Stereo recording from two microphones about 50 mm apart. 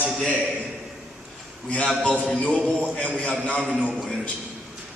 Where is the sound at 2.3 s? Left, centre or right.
Left.